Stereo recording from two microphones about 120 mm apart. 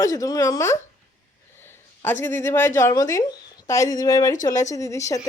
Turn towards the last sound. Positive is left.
turn(degrees=25)  # may be behind; listen again after turning